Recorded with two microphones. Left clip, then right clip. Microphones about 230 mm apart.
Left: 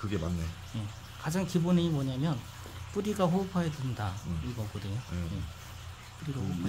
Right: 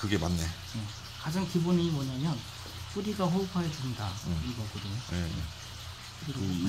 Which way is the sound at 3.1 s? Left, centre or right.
Left.